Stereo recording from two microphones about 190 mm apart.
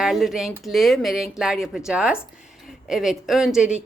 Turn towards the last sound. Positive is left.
turn(degrees=-5)  # may be behind; listen again after turning